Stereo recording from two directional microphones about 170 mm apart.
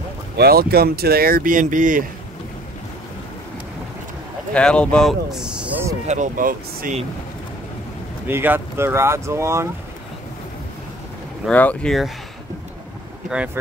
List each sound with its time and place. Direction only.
0.4 s speech: 65° right (ahead or behind)
4.6 s speech: 5° left (ahead or behind); by 5.9 s 10° right (ahead or behind)
6.0 s speech: 45° right (ahead or behind)
8.3 s speech: 15° right (ahead or behind)
11.4 s speech: 5° left (ahead or behind)